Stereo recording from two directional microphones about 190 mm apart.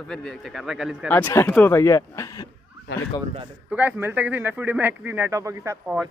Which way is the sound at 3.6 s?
10° right (ahead or behind).